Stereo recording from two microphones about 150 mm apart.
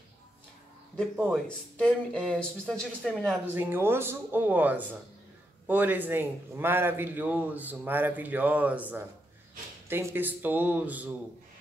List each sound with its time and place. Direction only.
1.3 s speech: 5° left (ahead or behind)
3.5 s a man's voice: 15° right (ahead or behind)